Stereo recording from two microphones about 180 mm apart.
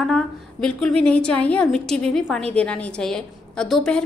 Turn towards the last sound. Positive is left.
turn(degrees=5)  # may be behind; listen again after turning